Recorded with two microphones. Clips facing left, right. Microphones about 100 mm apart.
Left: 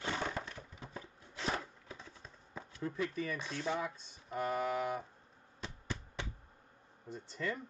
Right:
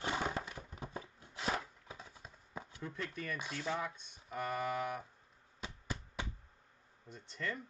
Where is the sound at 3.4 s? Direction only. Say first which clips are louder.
Left 2 dB; 10° right (ahead or behind).